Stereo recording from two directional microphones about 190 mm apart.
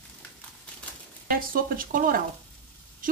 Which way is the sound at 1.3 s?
45° right (ahead or behind).